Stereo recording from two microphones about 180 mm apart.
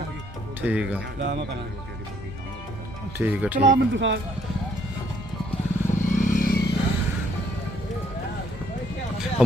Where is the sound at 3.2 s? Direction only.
10° right (ahead or behind).